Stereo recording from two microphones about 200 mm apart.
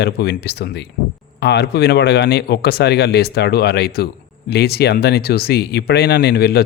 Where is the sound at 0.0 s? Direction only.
55° left (ahead or behind).